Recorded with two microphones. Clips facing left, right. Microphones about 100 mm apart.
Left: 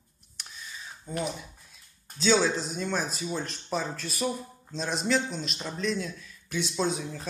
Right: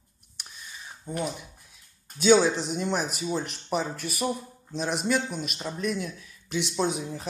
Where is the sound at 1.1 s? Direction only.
20° right (ahead or behind).